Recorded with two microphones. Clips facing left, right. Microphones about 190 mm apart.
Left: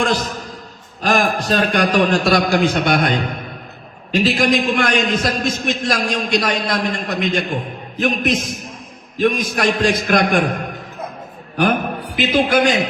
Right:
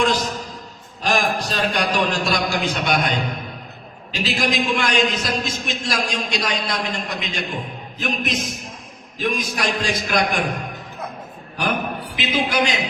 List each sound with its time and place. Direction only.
1.0 s a man's voice: 55° left (ahead or behind)
11.5 s a man's voice: 55° left (ahead or behind)